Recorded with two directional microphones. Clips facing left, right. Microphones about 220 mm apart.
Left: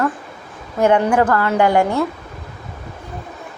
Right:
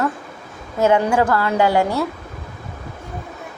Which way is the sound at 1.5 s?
20° left (ahead or behind).